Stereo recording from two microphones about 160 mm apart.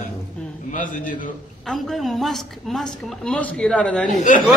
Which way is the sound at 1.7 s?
Centre (ahead or behind).